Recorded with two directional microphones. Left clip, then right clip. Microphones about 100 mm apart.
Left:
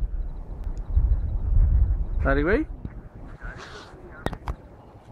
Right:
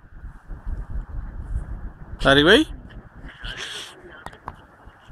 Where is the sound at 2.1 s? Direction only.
35° right (ahead or behind).